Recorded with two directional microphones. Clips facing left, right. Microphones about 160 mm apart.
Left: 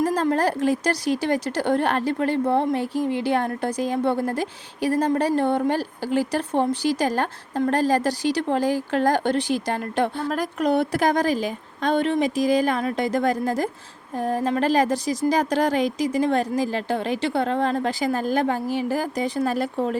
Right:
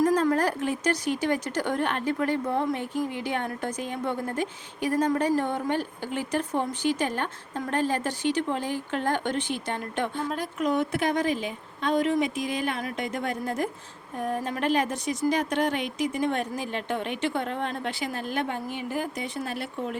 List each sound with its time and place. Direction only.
0.0 s a woman's voice: 30° left (ahead or behind)
10.2 s a woman's voice: 80° left
10.7 s a woman's voice: 35° left (ahead or behind)